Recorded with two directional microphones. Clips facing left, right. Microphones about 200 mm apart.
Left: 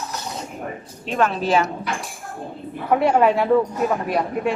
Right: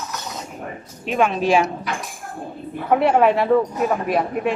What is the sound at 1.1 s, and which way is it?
A woman's voice, 10° right (ahead or behind).